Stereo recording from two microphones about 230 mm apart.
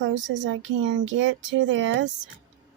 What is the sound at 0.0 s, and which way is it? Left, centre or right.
Speech, right.